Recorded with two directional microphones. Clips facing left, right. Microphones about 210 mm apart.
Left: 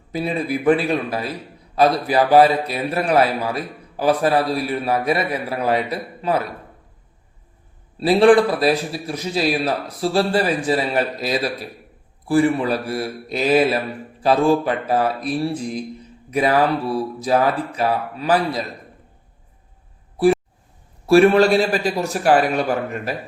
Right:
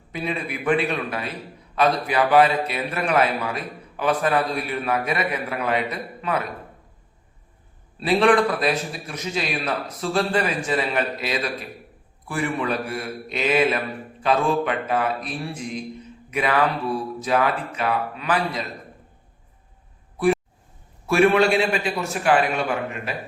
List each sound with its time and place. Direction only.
0.1 s a man's voice: 35° left (ahead or behind)
7.9 s a man's voice: 35° left (ahead or behind)
21.1 s a man's voice: 35° left (ahead or behind)